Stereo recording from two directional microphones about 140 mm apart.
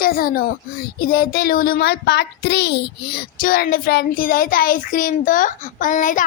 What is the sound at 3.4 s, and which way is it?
A child's voice, 90° left.